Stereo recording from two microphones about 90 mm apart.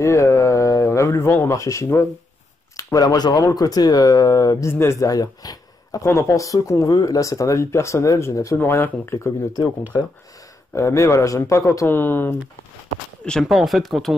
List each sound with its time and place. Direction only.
0.0 s speech: 35° left (ahead or behind)
10.7 s speech: 30° left (ahead or behind)
11.9 s speech: 25° left (ahead or behind)
13.2 s speech: 5° left (ahead or behind)